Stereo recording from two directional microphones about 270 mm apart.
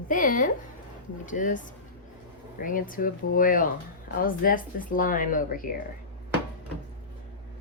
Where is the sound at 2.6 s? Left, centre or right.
Left.